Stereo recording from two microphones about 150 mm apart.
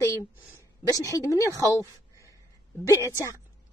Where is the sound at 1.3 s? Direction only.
20° left (ahead or behind).